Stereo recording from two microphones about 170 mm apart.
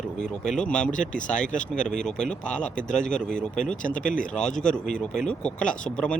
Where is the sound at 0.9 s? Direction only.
50° left (ahead or behind).